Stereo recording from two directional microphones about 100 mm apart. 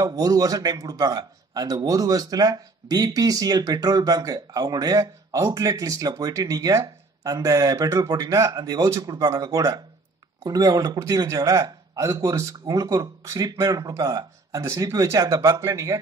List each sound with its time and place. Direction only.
0.0 s a man's voice: 40° right (ahead or behind)